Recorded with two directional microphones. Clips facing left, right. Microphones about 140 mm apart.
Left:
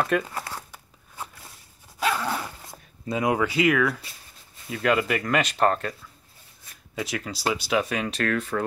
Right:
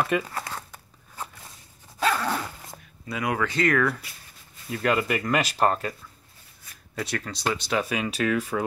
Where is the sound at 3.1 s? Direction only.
25° left (ahead or behind).